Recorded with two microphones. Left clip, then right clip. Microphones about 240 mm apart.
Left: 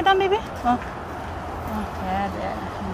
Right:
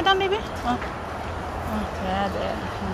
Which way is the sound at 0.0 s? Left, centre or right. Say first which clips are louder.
Left 2 dB; centre.